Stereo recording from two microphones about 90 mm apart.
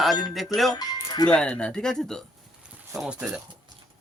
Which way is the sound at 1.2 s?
10° left (ahead or behind).